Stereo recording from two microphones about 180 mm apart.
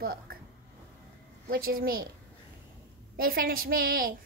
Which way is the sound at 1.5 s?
55° right (ahead or behind).